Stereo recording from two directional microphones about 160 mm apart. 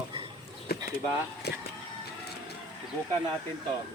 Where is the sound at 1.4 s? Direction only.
90° left.